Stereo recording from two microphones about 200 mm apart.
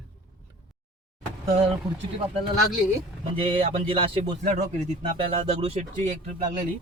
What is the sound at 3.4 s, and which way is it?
Speech, 25° right (ahead or behind).